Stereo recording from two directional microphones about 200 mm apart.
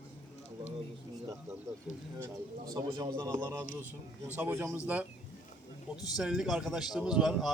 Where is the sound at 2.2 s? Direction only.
15° right (ahead or behind).